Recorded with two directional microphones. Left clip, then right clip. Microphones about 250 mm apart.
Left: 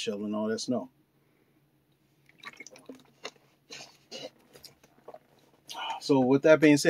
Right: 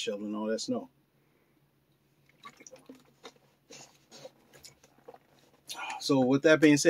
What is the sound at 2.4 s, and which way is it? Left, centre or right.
Drip, left.